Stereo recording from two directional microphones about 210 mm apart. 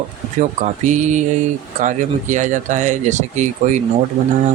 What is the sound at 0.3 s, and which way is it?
Speech, 35° right (ahead or behind).